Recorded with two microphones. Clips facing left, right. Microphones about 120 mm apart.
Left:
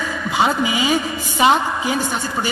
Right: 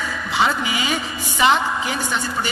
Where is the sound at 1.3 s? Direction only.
40° left (ahead or behind).